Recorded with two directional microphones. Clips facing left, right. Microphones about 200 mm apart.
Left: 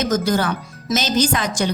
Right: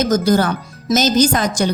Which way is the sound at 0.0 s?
40° right (ahead or behind).